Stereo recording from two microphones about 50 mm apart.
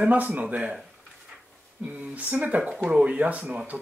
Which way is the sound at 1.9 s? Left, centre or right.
Right.